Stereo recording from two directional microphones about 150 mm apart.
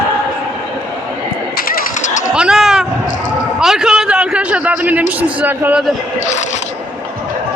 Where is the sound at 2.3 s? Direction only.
5° right (ahead or behind).